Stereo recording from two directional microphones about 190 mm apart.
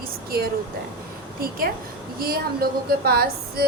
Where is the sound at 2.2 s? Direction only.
50° right (ahead or behind).